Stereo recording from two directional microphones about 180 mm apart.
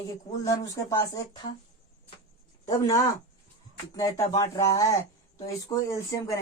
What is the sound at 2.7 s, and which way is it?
Speech, 20° left (ahead or behind).